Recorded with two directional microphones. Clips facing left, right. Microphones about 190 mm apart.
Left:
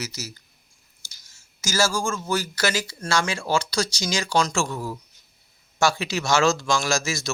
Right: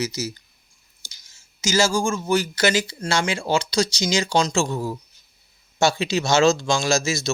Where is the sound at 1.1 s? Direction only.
20° right (ahead or behind).